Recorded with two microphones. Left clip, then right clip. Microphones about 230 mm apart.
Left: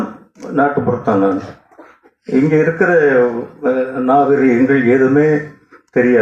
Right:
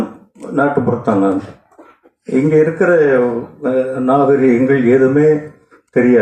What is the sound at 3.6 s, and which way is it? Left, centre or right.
Mantra, right.